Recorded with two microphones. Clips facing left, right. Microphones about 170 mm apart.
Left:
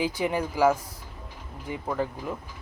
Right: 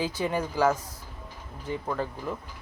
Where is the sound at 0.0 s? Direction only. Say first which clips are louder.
Left 2 dB; 10° left (ahead or behind).